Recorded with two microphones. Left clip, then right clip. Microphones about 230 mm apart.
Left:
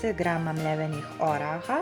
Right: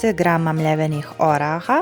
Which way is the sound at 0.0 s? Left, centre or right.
Right.